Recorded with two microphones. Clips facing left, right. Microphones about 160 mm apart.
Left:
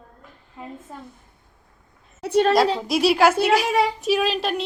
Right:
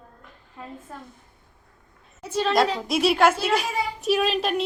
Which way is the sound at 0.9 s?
15° left (ahead or behind).